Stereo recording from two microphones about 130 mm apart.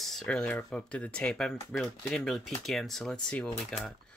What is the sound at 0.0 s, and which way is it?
Speech, centre (ahead or behind).